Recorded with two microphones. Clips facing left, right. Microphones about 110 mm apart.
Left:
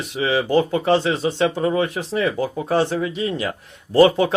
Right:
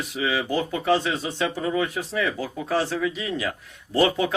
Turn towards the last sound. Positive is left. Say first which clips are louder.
# left 7 dB
turn(degrees=30)  # may be behind; listen again after turning